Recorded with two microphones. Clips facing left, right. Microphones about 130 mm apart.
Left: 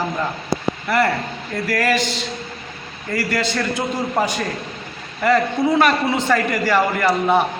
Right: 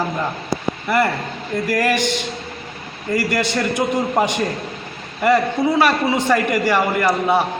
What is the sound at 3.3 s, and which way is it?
A man's voice, 15° right (ahead or behind).